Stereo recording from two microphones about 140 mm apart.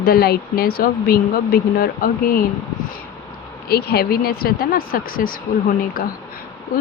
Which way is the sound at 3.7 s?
90° left.